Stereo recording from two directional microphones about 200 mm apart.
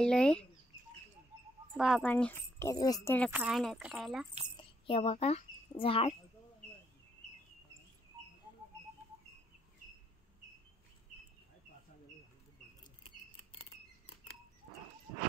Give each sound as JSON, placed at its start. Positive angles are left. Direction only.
{"t": 0.0, "sound": "speech", "side_deg": 5}
{"t": 1.8, "sound": "speech", "side_deg": 0}
{"t": 2.6, "sound": "speech", "side_deg": 15}
{"t": 3.3, "sound": "speech", "side_deg": -5}
{"t": 4.6, "sound": "a child's voice", "side_deg": 25}